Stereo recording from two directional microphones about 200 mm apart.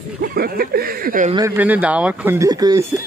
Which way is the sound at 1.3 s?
15° right (ahead or behind).